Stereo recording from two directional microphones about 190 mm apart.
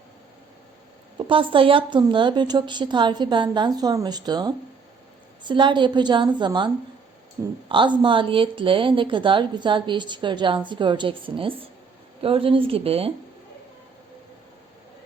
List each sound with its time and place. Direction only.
1.3 s a woman's voice: 25° right (ahead or behind)
7.7 s a woman's voice: 25° right (ahead or behind)